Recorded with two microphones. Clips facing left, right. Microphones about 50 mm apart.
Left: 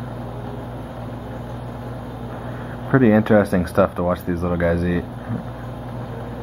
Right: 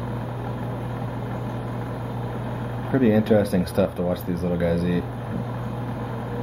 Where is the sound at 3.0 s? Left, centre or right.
Left.